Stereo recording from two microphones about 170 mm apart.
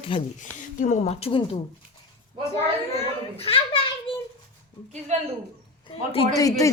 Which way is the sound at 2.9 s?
35° left (ahead or behind).